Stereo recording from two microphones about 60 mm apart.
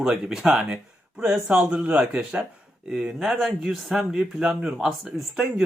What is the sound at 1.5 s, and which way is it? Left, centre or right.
Speech, right.